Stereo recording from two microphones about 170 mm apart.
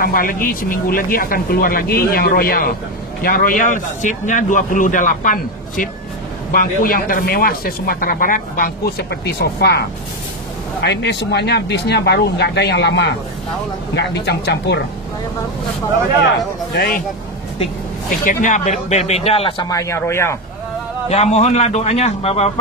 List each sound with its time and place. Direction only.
0.0 s a man's voice: 55° left (ahead or behind); by 9.8 s 75° left (ahead or behind)
10.8 s speech: 85° left
16.7 s speech: 65° left (ahead or behind)
18.2 s speech: 50° left (ahead or behind); by 20.3 s 15° left (ahead or behind)
21.1 s speech: 40° left (ahead or behind)